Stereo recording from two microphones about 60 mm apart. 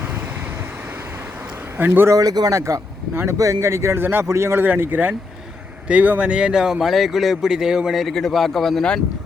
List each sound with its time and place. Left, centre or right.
1.8 s speech: right
2.1 s speech: right
2.6 s speech: right
4.0 s speech: right
4.3 s speech: right
4.6 s speech: right; by 8.9 s centre